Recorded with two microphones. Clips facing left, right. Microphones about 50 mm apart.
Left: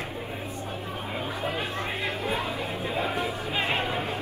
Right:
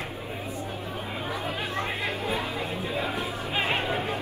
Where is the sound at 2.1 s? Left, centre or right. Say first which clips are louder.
Even; left.